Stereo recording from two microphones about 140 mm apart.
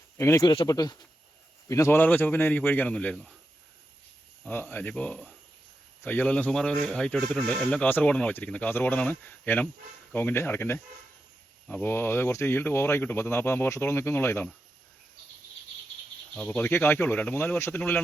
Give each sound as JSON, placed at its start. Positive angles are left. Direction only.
{"t": 0.2, "sound": "speech", "side_deg": 20}
{"t": 0.4, "sound": "speech", "side_deg": 30}
{"t": 4.4, "sound": "speech", "side_deg": 15}
{"t": 16.3, "sound": "speech", "side_deg": 10}